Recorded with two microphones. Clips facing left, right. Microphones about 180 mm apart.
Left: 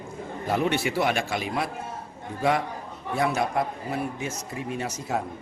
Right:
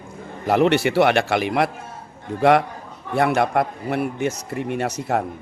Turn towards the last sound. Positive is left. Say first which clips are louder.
# right 6 dB
turn(degrees=-65)  # may be behind; listen again after turning